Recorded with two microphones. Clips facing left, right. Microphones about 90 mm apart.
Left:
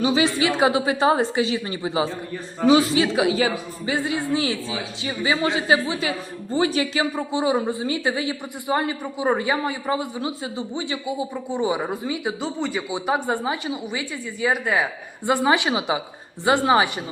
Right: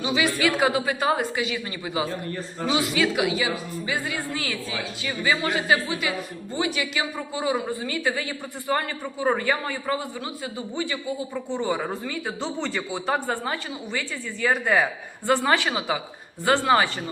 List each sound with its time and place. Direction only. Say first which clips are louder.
0.0 s speech: left 5 dB; 35° left (ahead or behind)
0.3 s speech: left 2 dB; 25° left (ahead or behind); by 14.8 s 5° left (ahead or behind)
15.3 s speech: left 2 dB; 20° left (ahead or behind)